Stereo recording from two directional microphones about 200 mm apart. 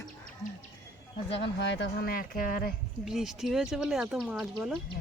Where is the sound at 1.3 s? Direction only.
60° left (ahead or behind); by 2.7 s 45° left (ahead or behind).